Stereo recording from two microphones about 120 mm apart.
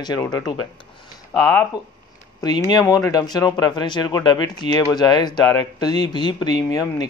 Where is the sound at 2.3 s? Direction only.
35° left (ahead or behind).